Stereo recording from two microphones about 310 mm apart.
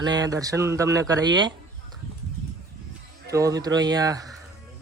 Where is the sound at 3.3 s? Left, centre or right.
Centre.